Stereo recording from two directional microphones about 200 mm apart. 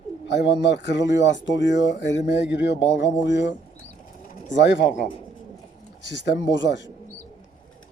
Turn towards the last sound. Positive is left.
turn(degrees=65)  # may be behind; listen again after turning